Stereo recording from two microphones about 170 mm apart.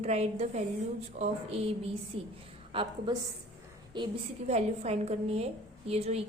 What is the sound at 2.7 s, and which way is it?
A woman's voice, 25° right (ahead or behind).